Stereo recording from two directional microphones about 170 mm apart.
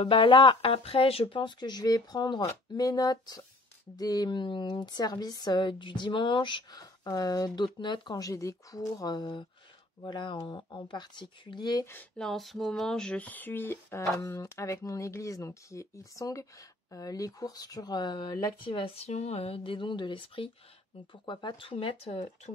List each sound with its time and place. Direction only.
0.0 s a woman's voice: 30° left (ahead or behind)